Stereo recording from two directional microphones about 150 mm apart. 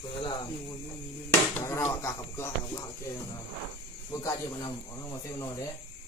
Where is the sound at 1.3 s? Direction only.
15° left (ahead or behind).